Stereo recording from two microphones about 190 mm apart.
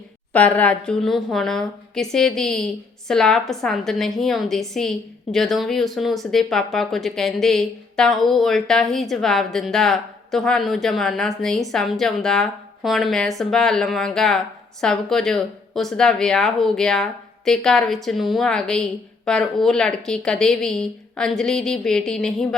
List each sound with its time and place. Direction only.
0.3 s a woman's voice: 5° left (ahead or behind)